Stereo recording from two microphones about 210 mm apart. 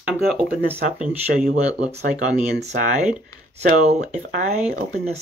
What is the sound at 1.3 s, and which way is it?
Speech, 35° right (ahead or behind).